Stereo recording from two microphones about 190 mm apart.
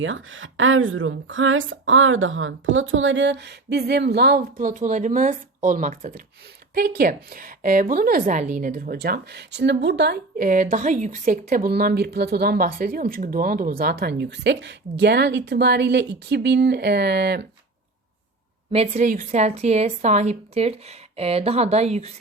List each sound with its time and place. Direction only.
0.0 s a woman's voice: 90° right; by 17.4 s 60° right (ahead or behind)
18.7 s a woman's voice: 35° right (ahead or behind)